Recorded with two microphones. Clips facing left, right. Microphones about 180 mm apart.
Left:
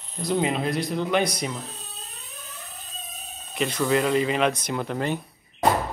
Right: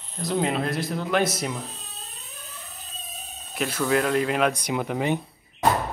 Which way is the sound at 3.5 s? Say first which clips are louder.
Left 1 dB; 5° right (ahead or behind).